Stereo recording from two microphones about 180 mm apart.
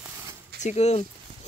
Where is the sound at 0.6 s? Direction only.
40° left (ahead or behind).